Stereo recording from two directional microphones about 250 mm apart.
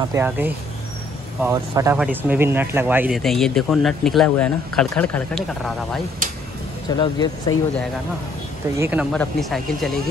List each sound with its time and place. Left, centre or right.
0.1 s speech: centre
6.9 s speech: centre
8.7 s speech: centre
9.1 s speech: centre